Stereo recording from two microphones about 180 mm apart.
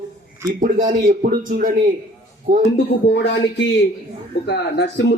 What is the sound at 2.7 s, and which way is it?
A man's voice, 70° left (ahead or behind).